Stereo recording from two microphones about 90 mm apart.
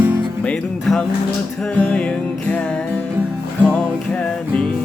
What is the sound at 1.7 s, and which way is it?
Music, 10° left (ahead or behind).